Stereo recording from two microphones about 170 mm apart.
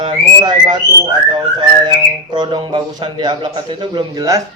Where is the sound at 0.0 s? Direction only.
25° right (ahead or behind).